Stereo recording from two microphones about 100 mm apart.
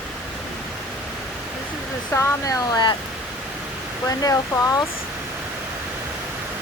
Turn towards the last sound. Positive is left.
turn(degrees=35)  # may be behind; listen again after turning